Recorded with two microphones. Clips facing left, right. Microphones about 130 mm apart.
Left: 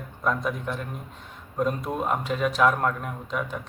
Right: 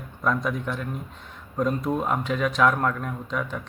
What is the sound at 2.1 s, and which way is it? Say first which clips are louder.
Speech: right 1 dB; 40° left (ahead or behind).